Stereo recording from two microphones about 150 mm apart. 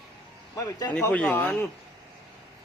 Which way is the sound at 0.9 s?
10° left (ahead or behind).